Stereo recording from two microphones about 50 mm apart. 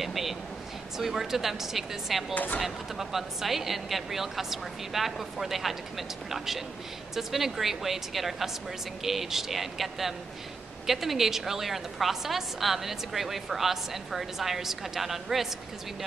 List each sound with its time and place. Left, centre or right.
0.0 s a sound: centre
0.9 s a woman's voice: centre
2.3 s speech: left
2.6 s a woman's voice: centre